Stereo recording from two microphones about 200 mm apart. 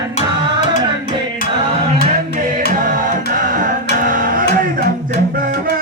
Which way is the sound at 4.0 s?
45° right (ahead or behind).